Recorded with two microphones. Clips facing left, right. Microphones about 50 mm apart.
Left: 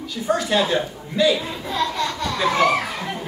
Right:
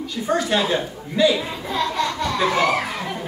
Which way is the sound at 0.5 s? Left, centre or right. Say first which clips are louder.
Left 1 dB; centre.